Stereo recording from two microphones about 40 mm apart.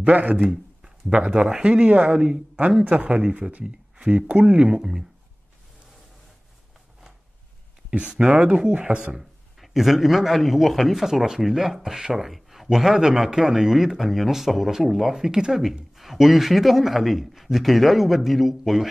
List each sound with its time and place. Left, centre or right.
0.0 s speech: right; by 4.2 s centre
4.3 s speech: right
4.6 s speech: centre
8.1 s speech: centre
9.2 s a man's voice: centre